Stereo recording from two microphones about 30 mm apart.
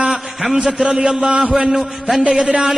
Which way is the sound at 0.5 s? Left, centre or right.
Centre.